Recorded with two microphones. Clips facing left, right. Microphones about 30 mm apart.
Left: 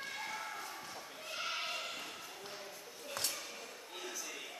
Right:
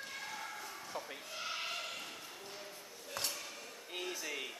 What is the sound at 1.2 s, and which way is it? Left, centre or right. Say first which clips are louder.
Bleat: left 7 dB; centre.